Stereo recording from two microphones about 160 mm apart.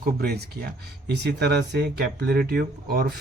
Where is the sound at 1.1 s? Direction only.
90° right.